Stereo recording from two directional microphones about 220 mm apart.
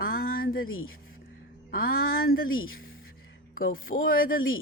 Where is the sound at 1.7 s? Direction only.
45° left (ahead or behind).